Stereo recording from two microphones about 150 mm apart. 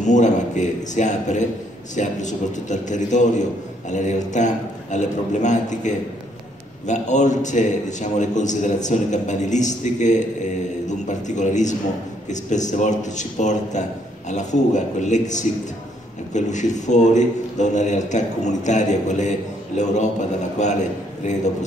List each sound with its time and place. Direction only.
0.0 s a man's voice: 55° left (ahead or behind)